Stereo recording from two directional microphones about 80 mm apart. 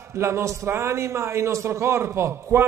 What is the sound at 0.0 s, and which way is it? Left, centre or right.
A man's voice, right.